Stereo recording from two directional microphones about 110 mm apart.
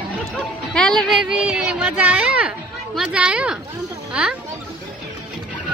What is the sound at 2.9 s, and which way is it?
Speech, 10° right (ahead or behind).